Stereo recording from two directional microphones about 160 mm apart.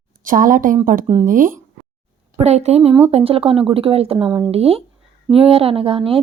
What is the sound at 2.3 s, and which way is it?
A woman's voice, 40° right (ahead or behind).